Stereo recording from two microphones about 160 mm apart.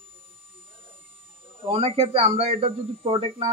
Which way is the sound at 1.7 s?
35° right (ahead or behind).